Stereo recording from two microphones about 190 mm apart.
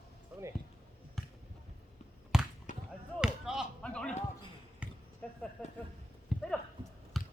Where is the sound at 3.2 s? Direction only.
5° right (ahead or behind).